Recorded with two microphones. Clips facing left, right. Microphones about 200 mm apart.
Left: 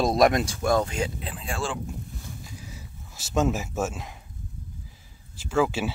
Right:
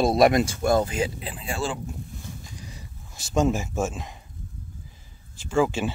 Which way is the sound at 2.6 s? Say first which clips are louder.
Even; 5° left (ahead or behind).